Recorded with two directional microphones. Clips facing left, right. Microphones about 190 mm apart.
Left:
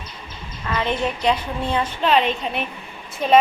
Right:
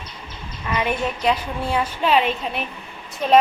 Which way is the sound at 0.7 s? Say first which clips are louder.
Even; 15° right (ahead or behind).